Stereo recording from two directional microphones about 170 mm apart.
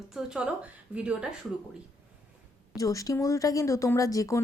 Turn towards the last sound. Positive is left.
turn(degrees=20)  # may be behind; listen again after turning